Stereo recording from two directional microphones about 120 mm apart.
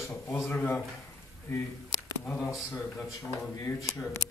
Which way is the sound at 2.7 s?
25° left (ahead or behind).